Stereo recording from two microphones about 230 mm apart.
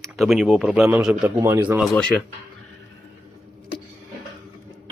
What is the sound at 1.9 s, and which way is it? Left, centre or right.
Speech, centre.